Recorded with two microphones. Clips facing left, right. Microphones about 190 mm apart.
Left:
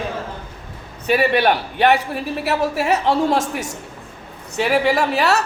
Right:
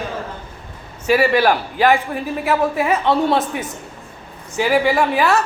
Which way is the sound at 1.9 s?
75° left (ahead or behind).